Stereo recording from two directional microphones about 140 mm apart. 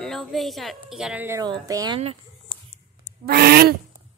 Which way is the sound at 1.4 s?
30° right (ahead or behind).